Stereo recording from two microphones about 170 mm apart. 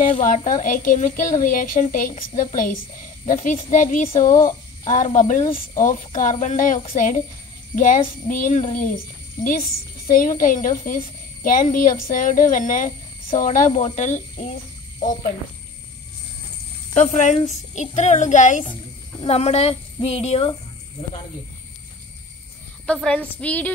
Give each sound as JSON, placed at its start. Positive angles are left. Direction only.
{"t": 0.0, "sound": "speech", "side_deg": 55}
{"t": 16.9, "sound": "a woman's voice", "side_deg": 45}
{"t": 22.9, "sound": "a woman's voice", "side_deg": 5}